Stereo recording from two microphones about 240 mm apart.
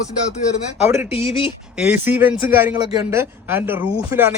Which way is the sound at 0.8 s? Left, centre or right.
Centre.